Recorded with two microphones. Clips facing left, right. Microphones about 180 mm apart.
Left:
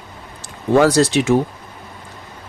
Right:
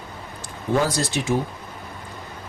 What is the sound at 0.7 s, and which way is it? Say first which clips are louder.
Speech: left 9 dB; 75° left (ahead or behind).